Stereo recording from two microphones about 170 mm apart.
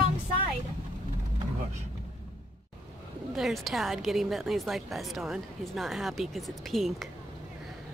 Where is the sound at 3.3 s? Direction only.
Centre (ahead or behind).